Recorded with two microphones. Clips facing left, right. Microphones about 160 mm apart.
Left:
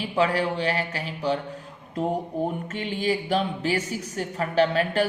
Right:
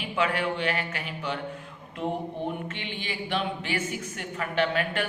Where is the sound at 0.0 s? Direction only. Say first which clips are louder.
Left 4 dB; 35° left (ahead or behind).